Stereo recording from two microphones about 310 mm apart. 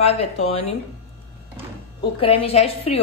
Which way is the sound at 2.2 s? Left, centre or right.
Centre.